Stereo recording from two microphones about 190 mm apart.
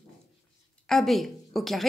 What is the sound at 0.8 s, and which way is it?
A woman's voice, centre (ahead or behind).